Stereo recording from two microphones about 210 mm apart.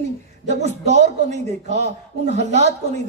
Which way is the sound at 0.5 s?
30° right (ahead or behind).